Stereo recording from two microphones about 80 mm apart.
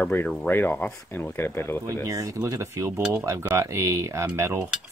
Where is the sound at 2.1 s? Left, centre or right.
Right.